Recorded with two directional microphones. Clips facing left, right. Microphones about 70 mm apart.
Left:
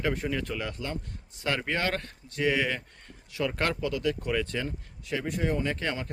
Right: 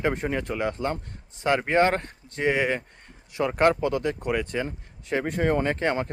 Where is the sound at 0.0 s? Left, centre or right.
Right.